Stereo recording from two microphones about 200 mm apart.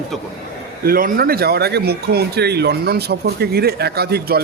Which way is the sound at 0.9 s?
45° right (ahead or behind).